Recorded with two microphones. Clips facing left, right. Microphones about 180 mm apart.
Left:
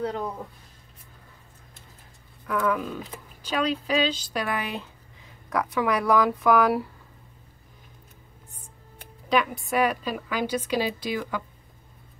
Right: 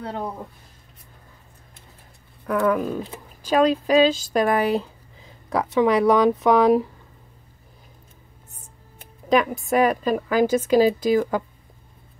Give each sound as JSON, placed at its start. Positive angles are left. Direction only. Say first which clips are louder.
{"t": 2.5, "sound": "a woman's voice", "louder": "right 5 dB", "side_deg": -45}
{"t": 9.3, "sound": "a woman's voice", "louder": "right 5 dB", "side_deg": -45}